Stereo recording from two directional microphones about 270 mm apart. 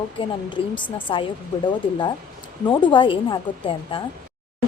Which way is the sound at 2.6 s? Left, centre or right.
Centre.